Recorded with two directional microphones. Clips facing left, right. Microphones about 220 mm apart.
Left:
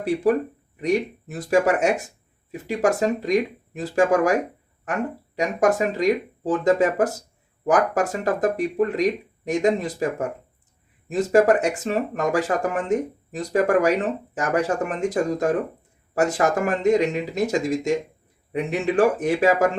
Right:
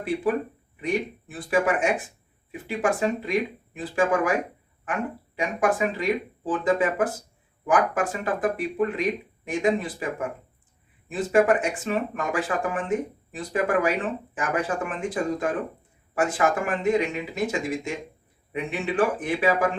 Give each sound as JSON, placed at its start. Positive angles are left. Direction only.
{"t": 0.0, "sound": "speech", "side_deg": 40}
{"t": 5.4, "sound": "speech", "side_deg": 40}